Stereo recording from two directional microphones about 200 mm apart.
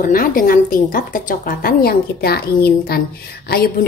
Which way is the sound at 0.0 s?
45° left (ahead or behind).